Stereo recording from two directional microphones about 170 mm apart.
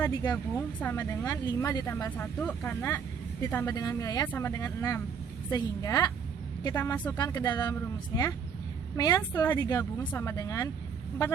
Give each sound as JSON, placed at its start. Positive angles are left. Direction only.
{"t": 0.8, "sound": "a woman's voice", "side_deg": 10}
{"t": 7.2, "sound": "a woman's voice", "side_deg": 25}